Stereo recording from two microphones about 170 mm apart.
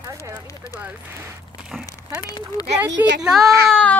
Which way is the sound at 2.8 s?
90° right.